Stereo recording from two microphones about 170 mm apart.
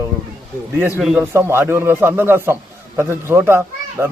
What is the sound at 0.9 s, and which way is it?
A child's voice, 5° right (ahead or behind).